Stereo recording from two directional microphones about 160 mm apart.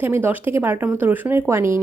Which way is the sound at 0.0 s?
10° right (ahead or behind).